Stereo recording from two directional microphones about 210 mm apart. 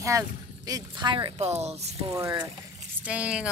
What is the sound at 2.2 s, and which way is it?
Speech, 15° right (ahead or behind).